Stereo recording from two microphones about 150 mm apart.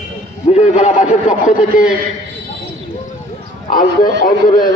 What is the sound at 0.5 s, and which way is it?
A man's voice, 50° left (ahead or behind).